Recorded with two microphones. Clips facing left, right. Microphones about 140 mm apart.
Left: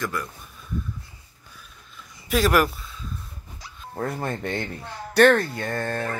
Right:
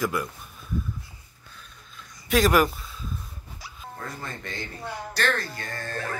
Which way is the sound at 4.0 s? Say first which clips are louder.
Left 10 dB; 55° left (ahead or behind).